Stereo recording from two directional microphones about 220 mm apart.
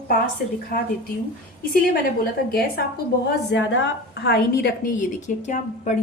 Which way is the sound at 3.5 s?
55° left (ahead or behind).